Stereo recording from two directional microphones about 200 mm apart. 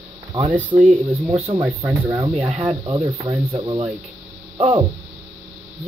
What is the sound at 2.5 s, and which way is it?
Speech, 30° right (ahead or behind).